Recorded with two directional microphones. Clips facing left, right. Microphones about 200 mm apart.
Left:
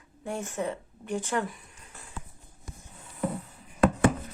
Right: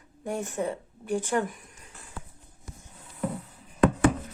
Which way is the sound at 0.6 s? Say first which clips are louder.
Right 2 dB; 10° right (ahead or behind).